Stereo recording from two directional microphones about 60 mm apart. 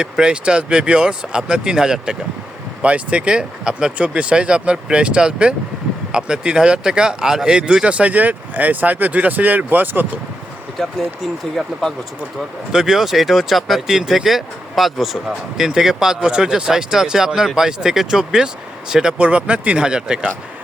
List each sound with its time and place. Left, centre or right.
0.0 s speech: centre
2.8 s speech: right
10.8 s speech: centre
12.7 s speech: centre
19.2 s speech: centre